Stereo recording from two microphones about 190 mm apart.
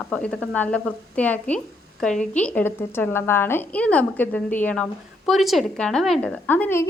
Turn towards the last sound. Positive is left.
turn(degrees=10)  # may be behind; listen again after turning